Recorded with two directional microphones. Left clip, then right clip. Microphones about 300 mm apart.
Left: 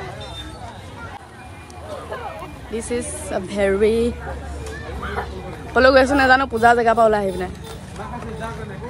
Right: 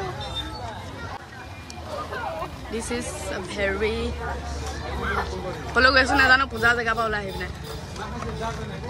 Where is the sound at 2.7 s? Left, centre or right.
Centre.